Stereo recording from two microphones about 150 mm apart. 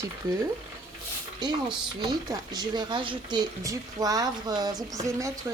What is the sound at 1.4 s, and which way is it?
Speech, 30° right (ahead or behind).